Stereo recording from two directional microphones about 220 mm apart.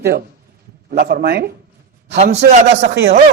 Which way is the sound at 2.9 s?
50° right (ahead or behind).